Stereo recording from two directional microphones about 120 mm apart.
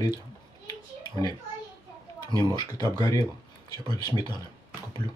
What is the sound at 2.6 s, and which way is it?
Speech, 35° left (ahead or behind).